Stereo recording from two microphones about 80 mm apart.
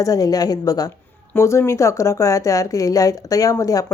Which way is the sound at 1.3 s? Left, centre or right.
Left.